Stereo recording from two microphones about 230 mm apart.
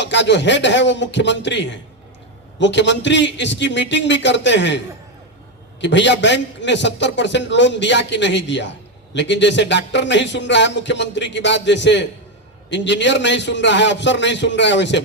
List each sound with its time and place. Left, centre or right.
0.0 s speech: left
5.8 s speech: left